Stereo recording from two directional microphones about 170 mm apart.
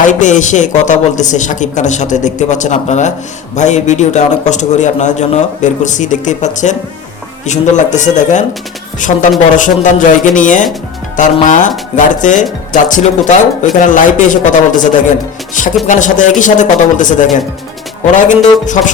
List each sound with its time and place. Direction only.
0.1 s a man's voice: 45° left (ahead or behind)